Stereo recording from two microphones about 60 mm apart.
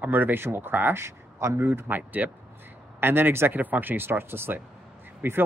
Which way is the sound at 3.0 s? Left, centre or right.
Right.